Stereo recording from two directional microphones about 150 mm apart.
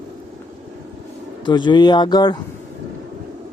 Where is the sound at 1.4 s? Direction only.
30° left (ahead or behind).